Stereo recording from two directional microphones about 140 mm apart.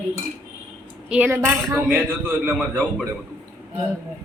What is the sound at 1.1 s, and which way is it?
Speech, 10° right (ahead or behind).